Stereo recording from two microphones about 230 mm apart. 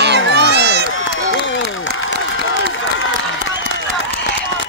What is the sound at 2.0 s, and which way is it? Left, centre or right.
Crowd, left.